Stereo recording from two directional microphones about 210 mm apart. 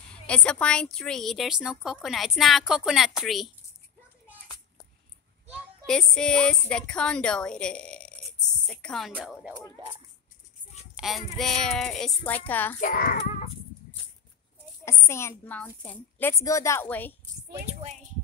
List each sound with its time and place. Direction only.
0.1 s a woman's voice: 5° left (ahead or behind)
5.9 s a woman's voice: 5° left (ahead or behind)
9.8 s speech: 25° right (ahead or behind)
11.0 s a woman's voice: centre (ahead or behind)
12.8 s a child's voice: 45° left (ahead or behind)
14.9 s a woman's voice: 10° left (ahead or behind)
17.6 s speech: 30° right (ahead or behind)